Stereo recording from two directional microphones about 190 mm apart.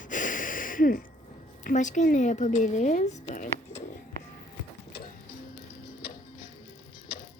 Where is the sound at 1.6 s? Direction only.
40° left (ahead or behind).